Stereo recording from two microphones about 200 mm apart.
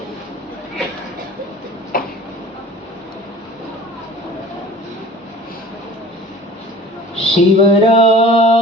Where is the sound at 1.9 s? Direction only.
45° left (ahead or behind).